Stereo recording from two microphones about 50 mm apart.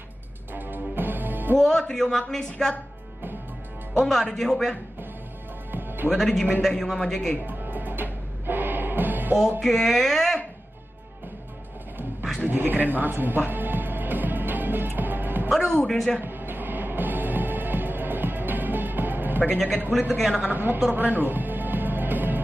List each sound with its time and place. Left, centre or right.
0.6 s music: right
1.6 s speech: centre
4.0 s speech: centre
5.7 s music: right
6.1 s speech: centre
7.4 s music: right
9.6 s speech: centre
12.4 s music: right
15.5 s speech: centre
16.2 s music: right
19.9 s speech: centre
20.4 s a woman's voice: right
20.9 s music: right